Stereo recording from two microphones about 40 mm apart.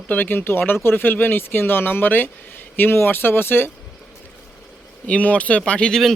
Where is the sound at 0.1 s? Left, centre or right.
Left.